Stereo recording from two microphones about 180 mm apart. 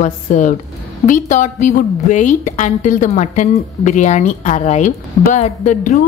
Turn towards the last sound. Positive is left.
turn(degrees=40)  # may be behind; listen again after turning